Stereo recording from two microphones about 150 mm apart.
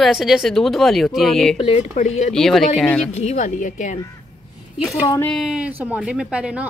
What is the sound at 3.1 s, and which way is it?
Speech, 50° left (ahead or behind).